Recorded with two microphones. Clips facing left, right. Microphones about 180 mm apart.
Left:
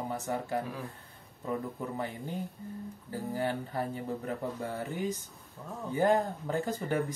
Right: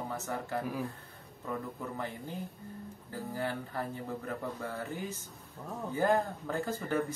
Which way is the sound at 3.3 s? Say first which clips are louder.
Left 3 dB; 20° left (ahead or behind).